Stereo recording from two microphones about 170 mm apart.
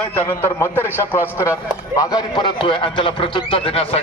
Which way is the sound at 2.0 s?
25° left (ahead or behind).